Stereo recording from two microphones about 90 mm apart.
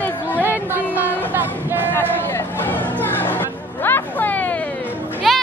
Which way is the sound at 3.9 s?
20° left (ahead or behind).